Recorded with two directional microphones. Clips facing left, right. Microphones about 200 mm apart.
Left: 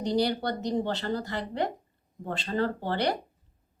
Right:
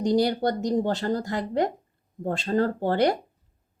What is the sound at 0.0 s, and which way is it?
Speech, 45° right (ahead or behind).